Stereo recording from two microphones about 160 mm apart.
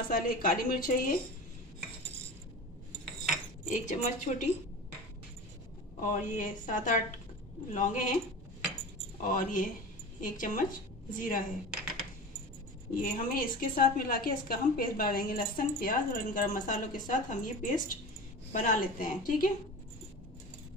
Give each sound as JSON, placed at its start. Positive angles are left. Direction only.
{"t": 0.1, "sound": "a woman's voice", "side_deg": 65}
{"t": 3.6, "sound": "a woman's voice", "side_deg": 50}
{"t": 5.9, "sound": "a woman's voice", "side_deg": 55}
{"t": 9.2, "sound": "a woman's voice", "side_deg": 55}
{"t": 11.7, "sound": "a sound", "side_deg": 0}
{"t": 12.9, "sound": "a woman's voice", "side_deg": 60}